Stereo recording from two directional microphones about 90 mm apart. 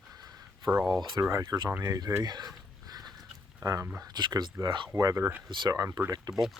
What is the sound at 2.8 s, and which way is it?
Mechanisms, 45° right (ahead or behind).